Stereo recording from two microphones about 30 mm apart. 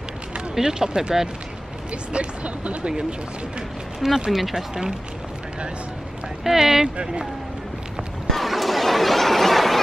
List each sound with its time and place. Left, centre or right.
0.6 s speech: right
2.1 s speech: right
3.0 s speech: right
4.3 s speech: centre
6.4 s speech: centre
7.0 s speech: right
8.3 s a sound: centre